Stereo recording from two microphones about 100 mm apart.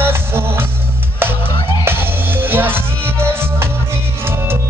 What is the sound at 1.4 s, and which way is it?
Music, 55° left (ahead or behind).